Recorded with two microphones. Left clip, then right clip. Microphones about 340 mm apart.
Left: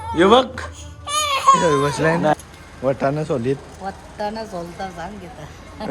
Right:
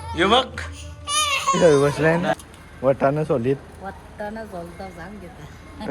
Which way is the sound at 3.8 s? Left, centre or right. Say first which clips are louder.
Left 6 dB; left.